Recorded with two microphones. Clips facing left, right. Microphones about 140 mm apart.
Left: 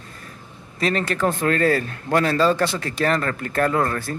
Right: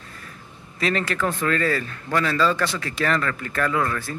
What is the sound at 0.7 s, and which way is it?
A man's voice, 40° left (ahead or behind).